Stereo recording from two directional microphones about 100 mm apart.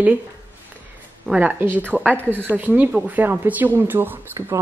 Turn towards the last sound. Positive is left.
turn(degrees=-25)  # may be behind; listen again after turning